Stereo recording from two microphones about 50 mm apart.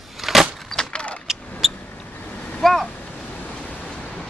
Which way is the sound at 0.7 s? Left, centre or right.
Centre.